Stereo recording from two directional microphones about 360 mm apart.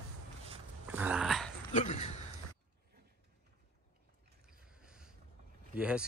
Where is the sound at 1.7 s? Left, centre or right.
Centre.